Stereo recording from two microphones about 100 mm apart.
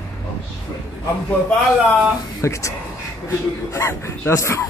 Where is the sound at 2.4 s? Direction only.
30° left (ahead or behind).